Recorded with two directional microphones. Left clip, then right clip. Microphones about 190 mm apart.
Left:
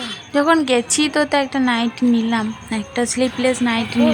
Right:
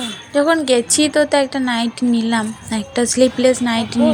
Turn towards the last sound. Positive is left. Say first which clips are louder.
# right 1 dB
turn(degrees=-10)  # may be behind; listen again after turning